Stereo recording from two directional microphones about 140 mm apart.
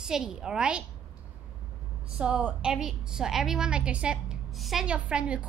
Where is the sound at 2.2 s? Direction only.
10° right (ahead or behind).